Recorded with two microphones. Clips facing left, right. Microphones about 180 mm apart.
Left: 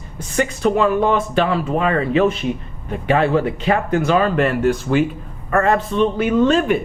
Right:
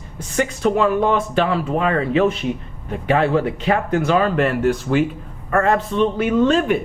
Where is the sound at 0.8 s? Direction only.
25° left (ahead or behind).